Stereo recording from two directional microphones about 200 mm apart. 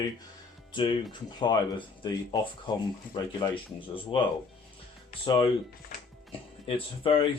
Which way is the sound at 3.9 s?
25° left (ahead or behind).